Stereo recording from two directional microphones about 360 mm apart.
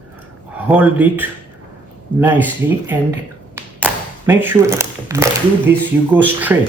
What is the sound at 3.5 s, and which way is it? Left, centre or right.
Speech, centre.